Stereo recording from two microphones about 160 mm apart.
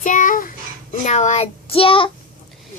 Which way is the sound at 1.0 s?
45° left (ahead or behind).